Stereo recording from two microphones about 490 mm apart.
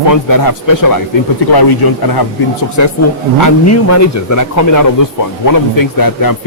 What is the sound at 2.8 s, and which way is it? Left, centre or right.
A man's voice, left.